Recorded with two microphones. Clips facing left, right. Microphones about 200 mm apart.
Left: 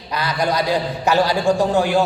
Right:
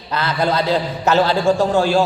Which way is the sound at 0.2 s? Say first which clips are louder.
Right 1 dB; 15° left (ahead or behind).